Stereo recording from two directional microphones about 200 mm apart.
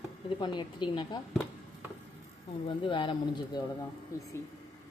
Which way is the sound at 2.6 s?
25° left (ahead or behind).